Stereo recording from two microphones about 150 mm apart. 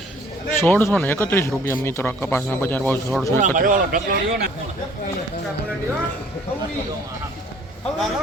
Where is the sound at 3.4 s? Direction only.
65° right (ahead or behind); by 4.5 s 80° right.